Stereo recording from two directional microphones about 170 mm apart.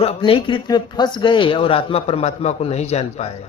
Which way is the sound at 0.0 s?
35° left (ahead or behind).